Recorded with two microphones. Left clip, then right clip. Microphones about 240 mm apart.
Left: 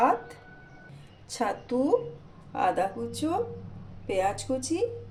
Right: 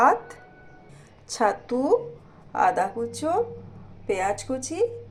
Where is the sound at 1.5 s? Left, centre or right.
Centre.